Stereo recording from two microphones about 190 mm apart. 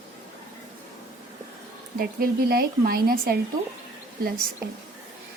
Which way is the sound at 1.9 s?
50° right (ahead or behind).